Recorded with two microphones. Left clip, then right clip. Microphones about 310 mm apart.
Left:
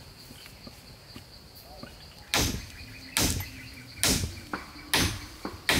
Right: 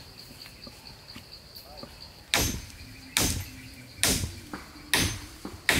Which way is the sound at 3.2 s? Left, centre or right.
Centre.